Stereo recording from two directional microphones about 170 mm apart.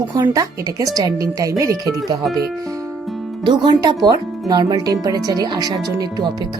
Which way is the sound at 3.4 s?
25° right (ahead or behind).